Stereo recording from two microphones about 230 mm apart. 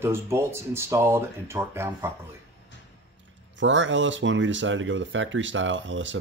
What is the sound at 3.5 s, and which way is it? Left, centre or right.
Speech, right.